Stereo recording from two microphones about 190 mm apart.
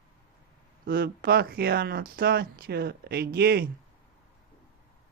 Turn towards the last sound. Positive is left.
turn(degrees=-55)  # may be behind; listen again after turning